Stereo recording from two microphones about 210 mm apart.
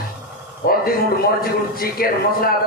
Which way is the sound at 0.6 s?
45° left (ahead or behind).